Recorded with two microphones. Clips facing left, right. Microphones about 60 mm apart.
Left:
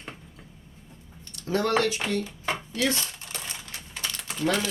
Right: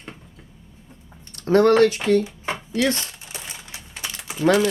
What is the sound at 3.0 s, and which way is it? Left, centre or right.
Crumpling, centre.